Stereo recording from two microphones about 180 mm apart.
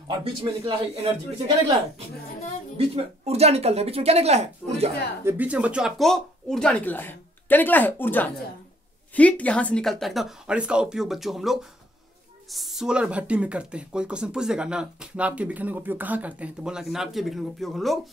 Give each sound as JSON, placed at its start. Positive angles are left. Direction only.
{"t": 0.2, "sound": "speech", "side_deg": -30}
{"t": 2.8, "sound": "speech", "side_deg": -35}
{"t": 5.2, "sound": "speech", "side_deg": -10}